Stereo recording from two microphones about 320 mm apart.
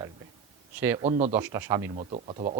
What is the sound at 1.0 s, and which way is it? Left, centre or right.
Speech, right.